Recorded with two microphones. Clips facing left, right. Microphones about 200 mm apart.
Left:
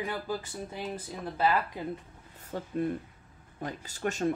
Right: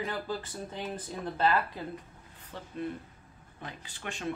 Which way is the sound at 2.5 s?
45° left (ahead or behind).